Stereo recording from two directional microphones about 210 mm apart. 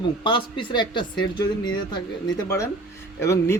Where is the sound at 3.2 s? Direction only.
15° left (ahead or behind).